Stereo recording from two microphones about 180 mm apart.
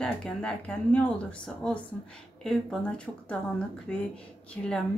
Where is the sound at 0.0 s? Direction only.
5° left (ahead or behind).